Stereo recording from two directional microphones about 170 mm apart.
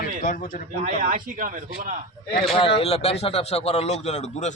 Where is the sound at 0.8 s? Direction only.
50° right (ahead or behind).